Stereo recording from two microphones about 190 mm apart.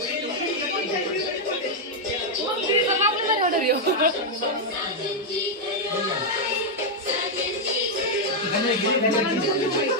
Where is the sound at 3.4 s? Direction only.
50° right (ahead or behind).